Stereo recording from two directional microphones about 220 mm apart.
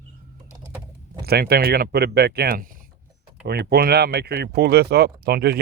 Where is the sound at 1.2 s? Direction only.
45° right (ahead or behind).